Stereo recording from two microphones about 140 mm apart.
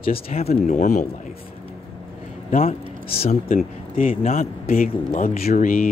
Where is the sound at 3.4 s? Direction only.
70° left (ahead or behind).